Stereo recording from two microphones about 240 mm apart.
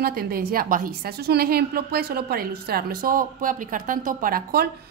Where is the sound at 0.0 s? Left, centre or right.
Right.